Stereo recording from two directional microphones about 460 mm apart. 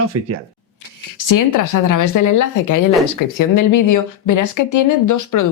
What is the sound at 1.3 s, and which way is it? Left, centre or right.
Speech, left.